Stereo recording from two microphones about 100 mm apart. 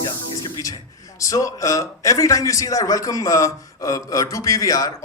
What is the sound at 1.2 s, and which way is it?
A man's voice, 35° left (ahead or behind).